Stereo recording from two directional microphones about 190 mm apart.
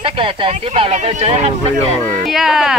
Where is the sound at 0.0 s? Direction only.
30° right (ahead or behind).